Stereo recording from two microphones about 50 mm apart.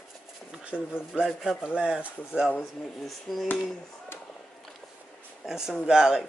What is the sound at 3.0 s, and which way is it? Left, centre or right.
Speech, centre.